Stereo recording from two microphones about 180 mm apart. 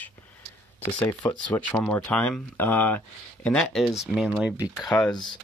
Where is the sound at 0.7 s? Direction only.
10° left (ahead or behind).